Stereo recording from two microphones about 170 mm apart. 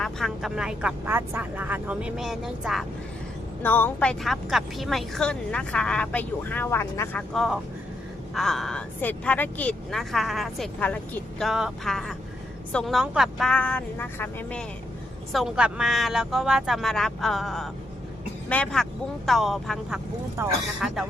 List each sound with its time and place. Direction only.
0.0 s speech: centre (ahead or behind)
3.6 s speech: 10° left (ahead or behind)
7.3 s speech: centre (ahead or behind)
15.3 s speech: centre (ahead or behind)
20.4 s speech: 15° right (ahead or behind)
20.8 s speech: centre (ahead or behind)